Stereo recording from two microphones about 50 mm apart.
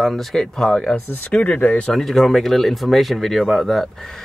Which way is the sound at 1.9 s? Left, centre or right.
Centre.